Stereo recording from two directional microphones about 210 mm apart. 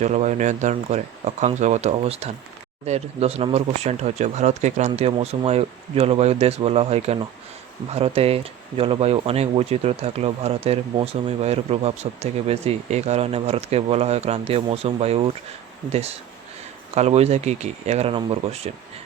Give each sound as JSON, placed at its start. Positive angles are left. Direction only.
{"t": 0.0, "sound": "speech", "side_deg": -35}